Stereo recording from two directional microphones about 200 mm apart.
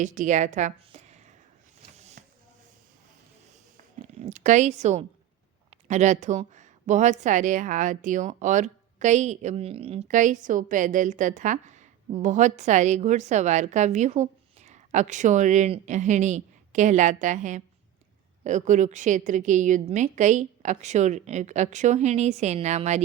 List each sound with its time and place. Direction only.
0.0 s a woman's voice: 40° right (ahead or behind)
2.0 s a sound: 35° right (ahead or behind)
3.8 s a woman's voice: 40° right (ahead or behind)